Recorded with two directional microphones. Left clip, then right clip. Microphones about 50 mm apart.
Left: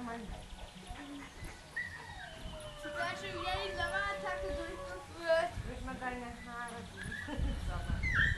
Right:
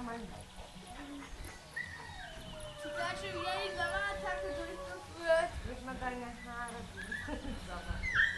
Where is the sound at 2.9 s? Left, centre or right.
Centre.